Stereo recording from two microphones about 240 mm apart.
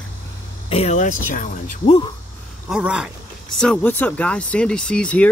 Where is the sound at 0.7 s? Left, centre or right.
Left.